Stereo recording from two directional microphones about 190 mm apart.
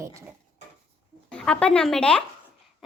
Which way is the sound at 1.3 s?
5° left (ahead or behind).